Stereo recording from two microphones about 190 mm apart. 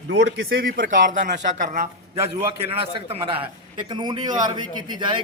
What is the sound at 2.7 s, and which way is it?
A man's voice, 30° right (ahead or behind).